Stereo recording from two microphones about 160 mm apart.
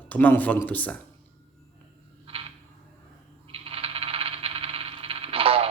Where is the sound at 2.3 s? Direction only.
35° right (ahead or behind).